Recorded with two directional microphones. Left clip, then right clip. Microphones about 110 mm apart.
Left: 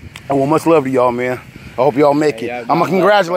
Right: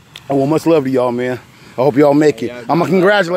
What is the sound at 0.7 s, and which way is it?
Speech, 90° right.